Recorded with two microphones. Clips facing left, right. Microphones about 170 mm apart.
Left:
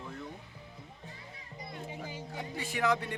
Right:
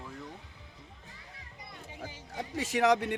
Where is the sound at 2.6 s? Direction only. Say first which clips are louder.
Right 5 dB; 85° right.